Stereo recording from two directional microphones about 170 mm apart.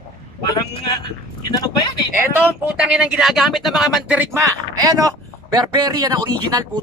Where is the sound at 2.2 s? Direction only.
10° right (ahead or behind).